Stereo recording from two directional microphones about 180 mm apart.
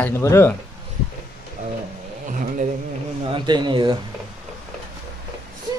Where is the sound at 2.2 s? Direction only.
45° right (ahead or behind).